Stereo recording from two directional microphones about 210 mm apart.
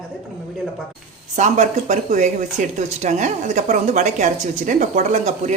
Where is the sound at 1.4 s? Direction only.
35° right (ahead or behind).